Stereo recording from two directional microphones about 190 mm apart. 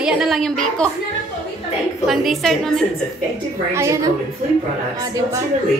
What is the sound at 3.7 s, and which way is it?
Speech, 15° right (ahead or behind).